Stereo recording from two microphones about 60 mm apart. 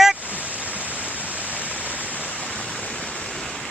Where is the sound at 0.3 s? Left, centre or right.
Right.